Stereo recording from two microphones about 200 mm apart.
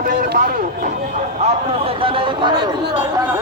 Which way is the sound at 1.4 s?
30° right (ahead or behind).